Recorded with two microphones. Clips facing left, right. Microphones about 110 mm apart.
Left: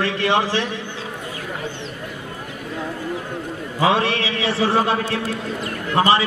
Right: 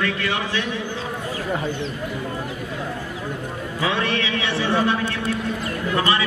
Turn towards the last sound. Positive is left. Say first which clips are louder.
# left 4 dB
turn(degrees=35)  # may be behind; listen again after turning